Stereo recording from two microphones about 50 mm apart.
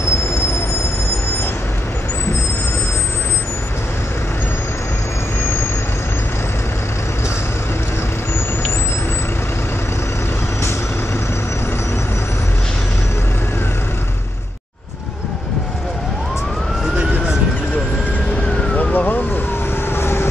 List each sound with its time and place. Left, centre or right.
18.8 s police car: left
19.9 s vehicle: left